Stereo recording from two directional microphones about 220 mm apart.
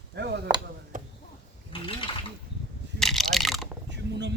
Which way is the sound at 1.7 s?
25° left (ahead or behind).